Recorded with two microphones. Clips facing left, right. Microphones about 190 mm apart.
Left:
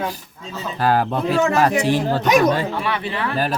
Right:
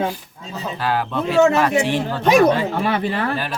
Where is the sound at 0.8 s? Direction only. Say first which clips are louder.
Left 4 dB; 45° left (ahead or behind).